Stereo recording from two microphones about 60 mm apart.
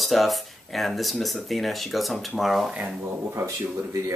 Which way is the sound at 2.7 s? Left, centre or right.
Centre.